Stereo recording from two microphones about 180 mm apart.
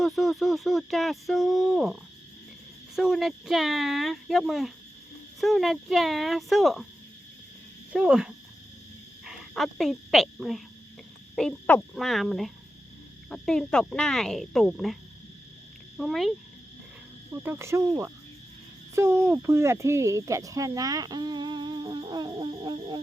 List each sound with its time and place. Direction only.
0.0 s speech: centre (ahead or behind)
7.9 s speech: 5° right (ahead or behind)
16.0 s speech: centre (ahead or behind)
17.4 s cricket: 15° right (ahead or behind)
18.9 s speech: 15° right (ahead or behind)